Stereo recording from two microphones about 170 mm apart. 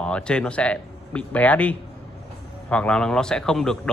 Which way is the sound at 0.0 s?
5° left (ahead or behind).